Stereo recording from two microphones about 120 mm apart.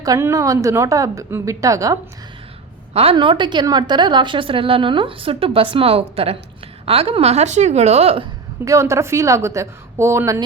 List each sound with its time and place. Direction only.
0.0 s speech: 25° right (ahead or behind)
2.9 s a woman's voice: 60° right (ahead or behind)
3.2 s a woman's voice: 40° right (ahead or behind)
8.6 s speech: 25° right (ahead or behind)